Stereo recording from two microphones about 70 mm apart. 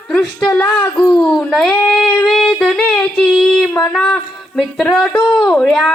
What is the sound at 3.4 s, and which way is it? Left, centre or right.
Child singing, centre.